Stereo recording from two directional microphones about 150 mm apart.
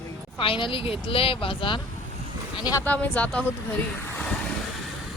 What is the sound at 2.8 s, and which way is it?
Speech, 10° left (ahead or behind).